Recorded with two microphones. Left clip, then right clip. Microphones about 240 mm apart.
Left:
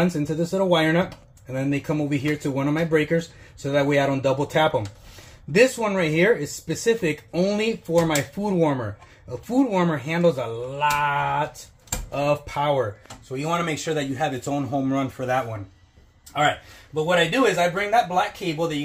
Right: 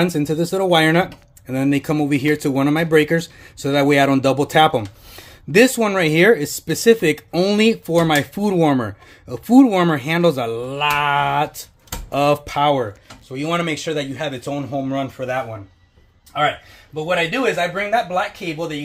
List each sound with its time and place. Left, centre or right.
0.0 s speech: right
13.3 s speech: right; by 15.4 s centre
16.9 s speech: centre